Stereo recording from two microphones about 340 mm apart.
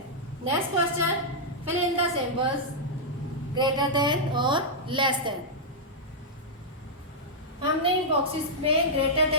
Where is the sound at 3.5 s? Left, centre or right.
Centre.